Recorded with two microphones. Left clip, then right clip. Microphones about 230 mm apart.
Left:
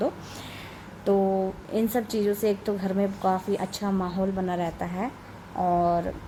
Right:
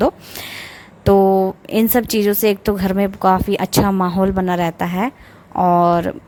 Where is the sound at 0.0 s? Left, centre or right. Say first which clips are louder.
Right 11 dB; right.